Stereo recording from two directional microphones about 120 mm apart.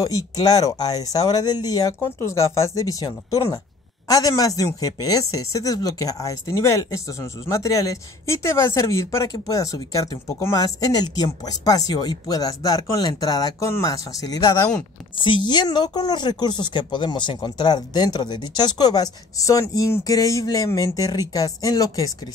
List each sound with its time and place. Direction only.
0.0 s speech: 30° left (ahead or behind)
15.1 s speech: 45° left (ahead or behind)